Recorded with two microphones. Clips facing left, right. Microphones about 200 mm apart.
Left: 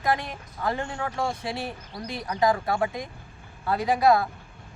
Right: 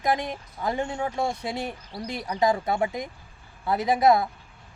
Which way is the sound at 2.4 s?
25° right (ahead or behind).